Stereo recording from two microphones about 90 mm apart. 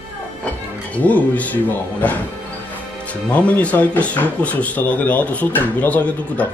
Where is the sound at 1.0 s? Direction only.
15° left (ahead or behind).